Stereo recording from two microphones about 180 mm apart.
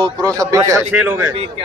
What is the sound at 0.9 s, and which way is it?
Speech, 10° right (ahead or behind).